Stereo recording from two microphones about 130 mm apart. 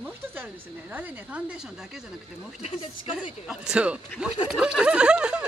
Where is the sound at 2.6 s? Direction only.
50° left (ahead or behind).